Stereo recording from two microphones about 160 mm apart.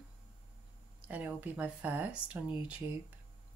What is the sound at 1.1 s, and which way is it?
A woman's voice, 10° right (ahead or behind).